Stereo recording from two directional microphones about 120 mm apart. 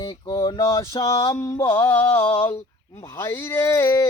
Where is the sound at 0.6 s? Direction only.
25° left (ahead or behind).